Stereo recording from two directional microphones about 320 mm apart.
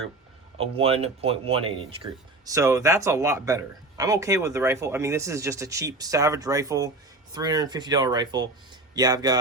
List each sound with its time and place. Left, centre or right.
0.6 s speech: centre